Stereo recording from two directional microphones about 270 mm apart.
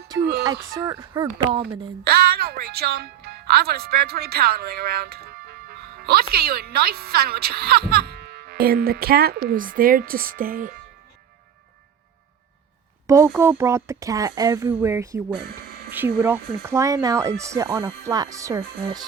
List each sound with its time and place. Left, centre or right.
0.4 s speech: centre
2.0 s speech: right
13.1 s speech: centre